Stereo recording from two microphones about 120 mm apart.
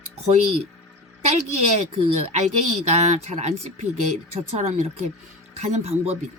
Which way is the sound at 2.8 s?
70° right (ahead or behind).